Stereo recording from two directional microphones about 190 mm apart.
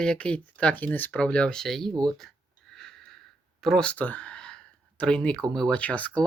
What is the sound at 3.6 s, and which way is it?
Speech, 5° left (ahead or behind).